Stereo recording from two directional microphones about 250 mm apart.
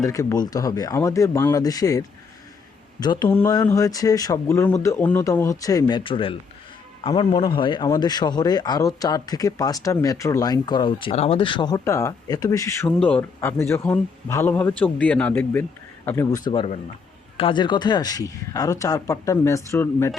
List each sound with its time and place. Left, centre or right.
0.0 s a man's voice: centre